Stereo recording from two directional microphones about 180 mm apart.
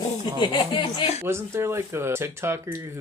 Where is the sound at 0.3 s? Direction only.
25° left (ahead or behind).